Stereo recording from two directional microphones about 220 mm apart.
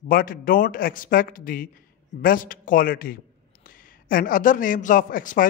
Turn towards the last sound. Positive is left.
turn(degrees=40)  # may be behind; listen again after turning